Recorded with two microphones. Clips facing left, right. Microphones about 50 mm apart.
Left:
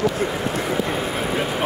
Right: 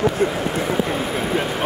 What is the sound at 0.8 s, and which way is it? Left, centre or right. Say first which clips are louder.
Vehicle: right 1 dB; centre.